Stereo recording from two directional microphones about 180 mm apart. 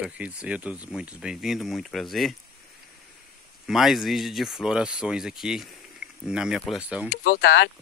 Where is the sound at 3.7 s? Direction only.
Centre (ahead or behind).